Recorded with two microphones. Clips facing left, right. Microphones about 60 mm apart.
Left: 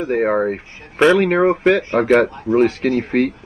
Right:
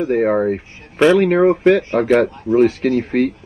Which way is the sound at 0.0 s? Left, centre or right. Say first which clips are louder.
Right 1 dB; centre.